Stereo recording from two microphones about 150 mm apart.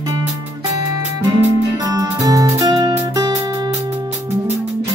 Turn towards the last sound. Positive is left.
turn(degrees=-25)  # may be behind; listen again after turning